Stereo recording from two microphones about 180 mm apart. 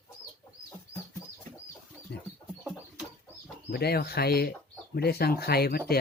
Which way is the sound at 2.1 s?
65° left (ahead or behind).